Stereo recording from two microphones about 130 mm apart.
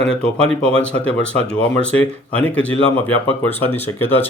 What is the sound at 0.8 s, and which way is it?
Speech, 10° left (ahead or behind).